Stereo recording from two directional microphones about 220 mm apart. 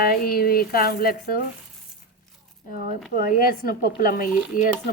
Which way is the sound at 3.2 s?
40° left (ahead or behind).